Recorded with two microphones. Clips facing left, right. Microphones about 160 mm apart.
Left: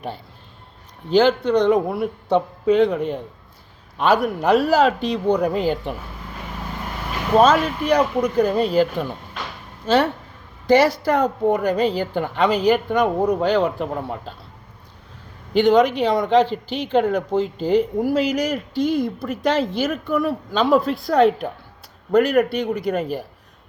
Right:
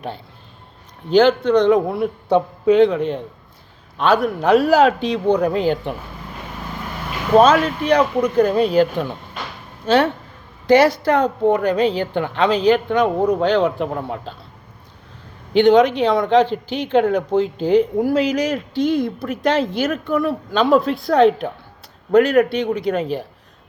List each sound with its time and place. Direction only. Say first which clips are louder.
1.1 s speech: right 3 dB; 5° left (ahead or behind)
7.3 s speech: right 3 dB; 5° left (ahead or behind)
15.5 s speech: right 3 dB; 5° left (ahead or behind)